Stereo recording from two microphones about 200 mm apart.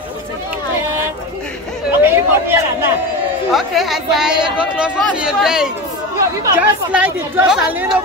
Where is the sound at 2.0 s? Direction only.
10° right (ahead or behind).